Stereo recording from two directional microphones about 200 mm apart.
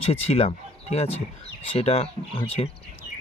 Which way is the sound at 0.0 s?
30° left (ahead or behind).